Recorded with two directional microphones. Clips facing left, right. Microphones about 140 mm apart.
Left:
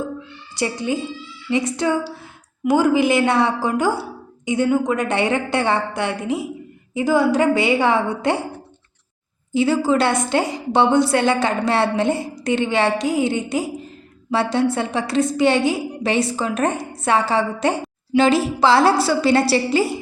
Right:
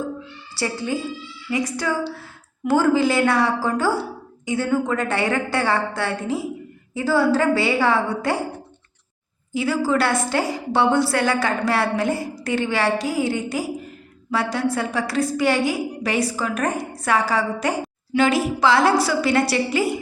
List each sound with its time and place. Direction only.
0.5 s a woman's voice: 20° left (ahead or behind)
9.5 s a woman's voice: 25° left (ahead or behind)